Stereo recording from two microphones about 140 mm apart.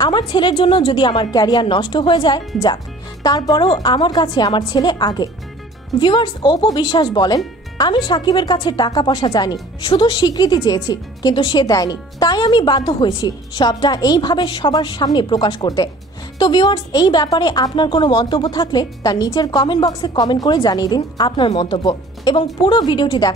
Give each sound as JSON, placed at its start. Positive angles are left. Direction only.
{"t": 0.0, "sound": "a woman's voice", "side_deg": 35}